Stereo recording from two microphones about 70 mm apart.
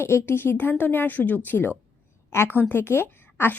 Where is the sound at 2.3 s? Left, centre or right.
Left.